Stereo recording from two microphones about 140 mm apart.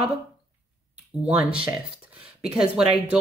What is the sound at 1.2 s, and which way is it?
Speech, 10° right (ahead or behind).